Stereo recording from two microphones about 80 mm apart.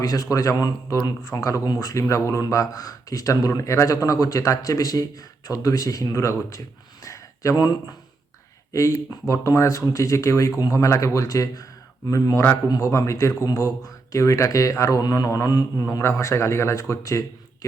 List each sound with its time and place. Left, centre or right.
0.0 s speech: left
1.6 s speech: left
1.9 s speech: left
7.0 s a sound: left
7.5 s speech: left
8.7 s speech: left
15.9 s speech: left